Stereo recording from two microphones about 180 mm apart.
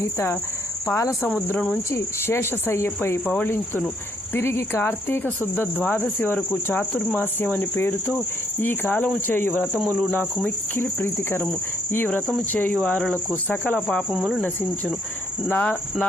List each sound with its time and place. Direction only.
0.0 s speech: 15° left (ahead or behind)
1.3 s speech: 5° left (ahead or behind)
13.8 s cricket: 5° right (ahead or behind)
15.4 s speech: 10° left (ahead or behind)